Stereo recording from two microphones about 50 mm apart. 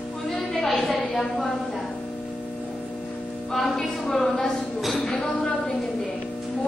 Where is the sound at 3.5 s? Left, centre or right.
Centre.